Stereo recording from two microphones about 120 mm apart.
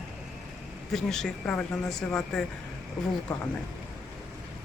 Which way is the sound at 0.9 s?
5° left (ahead or behind).